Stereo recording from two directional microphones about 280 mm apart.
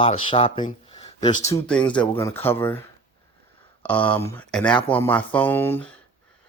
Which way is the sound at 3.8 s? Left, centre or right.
Centre.